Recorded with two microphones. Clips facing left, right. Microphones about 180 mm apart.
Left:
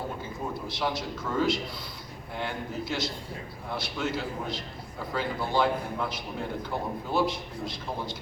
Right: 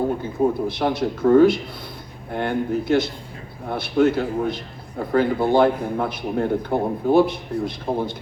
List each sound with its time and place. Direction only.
0.7 s a man's voice: 60° right (ahead or behind)